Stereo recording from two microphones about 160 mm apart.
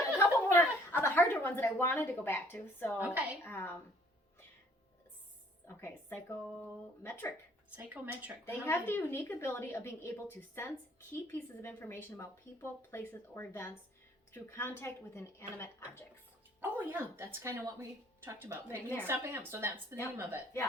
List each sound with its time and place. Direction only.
0.2 s a sound: 15° left (ahead or behind)
3.0 s a woman's voice: 10° right (ahead or behind)
3.4 s speech: 15° left (ahead or behind)
5.6 s speech: 15° left (ahead or behind)
7.8 s a woman's voice: 10° right (ahead or behind)
8.4 s speech: 15° left (ahead or behind)
16.6 s a woman's voice: 15° right (ahead or behind)